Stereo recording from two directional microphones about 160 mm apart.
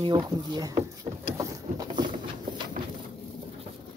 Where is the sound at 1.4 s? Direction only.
25° right (ahead or behind).